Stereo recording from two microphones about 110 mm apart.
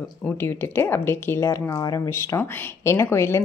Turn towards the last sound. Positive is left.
turn(degrees=25)  # may be behind; listen again after turning